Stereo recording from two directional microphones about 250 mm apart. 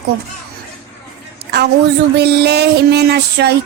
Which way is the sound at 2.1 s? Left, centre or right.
Right.